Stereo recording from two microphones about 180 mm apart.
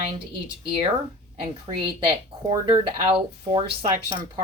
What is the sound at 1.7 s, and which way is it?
A woman's voice, 30° right (ahead or behind).